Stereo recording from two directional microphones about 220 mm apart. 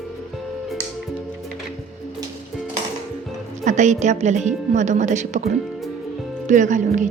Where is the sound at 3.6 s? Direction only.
35° right (ahead or behind).